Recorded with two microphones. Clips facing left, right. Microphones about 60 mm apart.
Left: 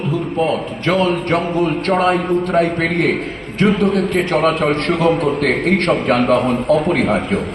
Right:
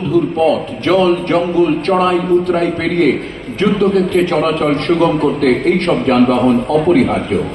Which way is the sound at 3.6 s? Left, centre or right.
Left.